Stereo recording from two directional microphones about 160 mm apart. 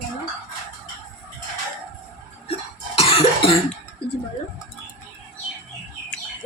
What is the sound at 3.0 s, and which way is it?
Cough, 35° left (ahead or behind).